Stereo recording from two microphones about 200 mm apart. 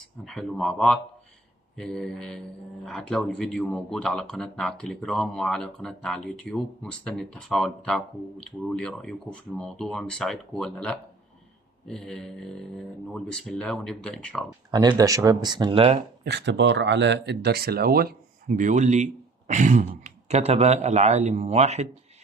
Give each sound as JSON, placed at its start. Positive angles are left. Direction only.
{"t": 0.3, "sound": "speech", "side_deg": 0}
{"t": 14.7, "sound": "speech", "side_deg": -20}
{"t": 16.2, "sound": "a man's voice", "side_deg": -60}